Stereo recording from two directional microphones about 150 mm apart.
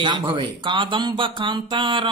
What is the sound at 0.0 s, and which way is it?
Speech, 30° right (ahead or behind).